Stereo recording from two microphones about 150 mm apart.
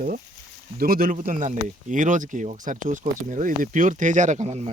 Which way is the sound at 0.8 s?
75° right (ahead or behind).